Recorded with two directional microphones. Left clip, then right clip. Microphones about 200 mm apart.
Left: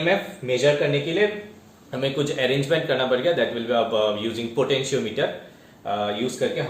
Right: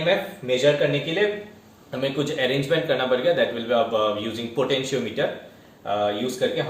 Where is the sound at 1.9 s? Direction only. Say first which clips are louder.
Left 1 dB; 20° left (ahead or behind).